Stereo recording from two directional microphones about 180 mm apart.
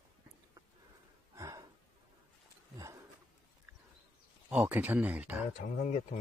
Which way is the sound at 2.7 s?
20° right (ahead or behind).